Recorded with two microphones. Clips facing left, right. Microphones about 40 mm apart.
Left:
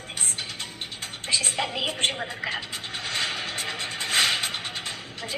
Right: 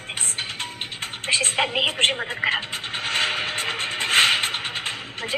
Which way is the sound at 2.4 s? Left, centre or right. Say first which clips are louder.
Right 7 dB; right.